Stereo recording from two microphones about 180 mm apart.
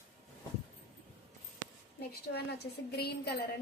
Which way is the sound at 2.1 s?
65° left (ahead or behind).